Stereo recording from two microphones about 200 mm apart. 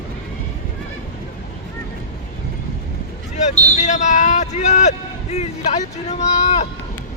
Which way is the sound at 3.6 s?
35° left (ahead or behind).